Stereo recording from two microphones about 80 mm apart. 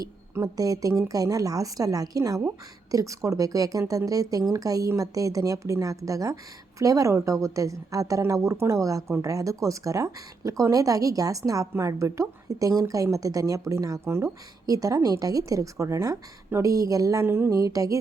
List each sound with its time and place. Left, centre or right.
0.4 s a woman's voice: right
14.0 s speech: right
14.7 s a woman's voice: right
17.2 s speech: right
17.6 s a woman's voice: right